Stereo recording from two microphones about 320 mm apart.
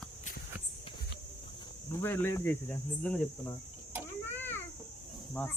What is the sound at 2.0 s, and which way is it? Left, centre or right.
Speech, centre.